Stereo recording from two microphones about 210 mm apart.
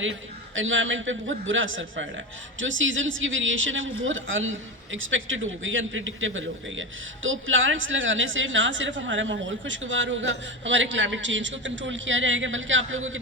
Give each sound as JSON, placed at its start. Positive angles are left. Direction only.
{"t": 0.0, "sound": "a man's voice", "side_deg": -65}